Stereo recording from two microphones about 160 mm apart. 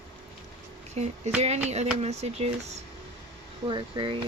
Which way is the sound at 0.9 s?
45° right (ahead or behind).